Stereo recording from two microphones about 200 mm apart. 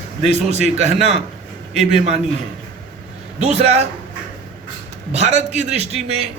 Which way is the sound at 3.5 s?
30° right (ahead or behind).